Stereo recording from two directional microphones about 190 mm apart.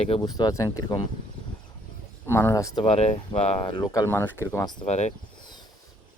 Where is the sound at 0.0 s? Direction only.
25° left (ahead or behind).